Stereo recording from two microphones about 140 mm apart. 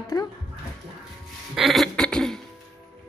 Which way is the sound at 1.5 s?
Centre (ahead or behind).